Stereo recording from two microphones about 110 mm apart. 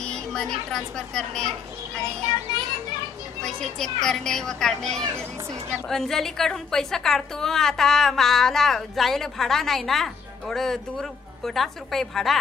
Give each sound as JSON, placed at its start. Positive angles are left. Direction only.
{"t": 0.0, "sound": "speech", "side_deg": 5}
{"t": 3.4, "sound": "speech", "side_deg": 5}